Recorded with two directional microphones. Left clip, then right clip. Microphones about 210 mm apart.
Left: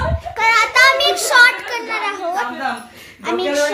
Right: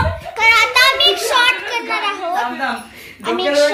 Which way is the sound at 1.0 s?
30° left (ahead or behind).